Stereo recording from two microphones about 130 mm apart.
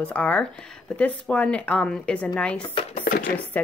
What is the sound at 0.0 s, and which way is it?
A woman's voice, 10° left (ahead or behind).